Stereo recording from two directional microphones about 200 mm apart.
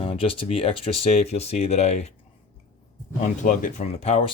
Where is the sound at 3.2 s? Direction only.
40° left (ahead or behind).